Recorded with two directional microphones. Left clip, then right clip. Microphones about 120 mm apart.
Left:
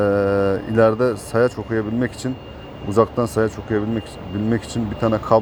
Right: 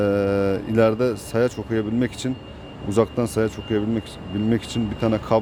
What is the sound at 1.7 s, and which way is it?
Speech, 35° right (ahead or behind).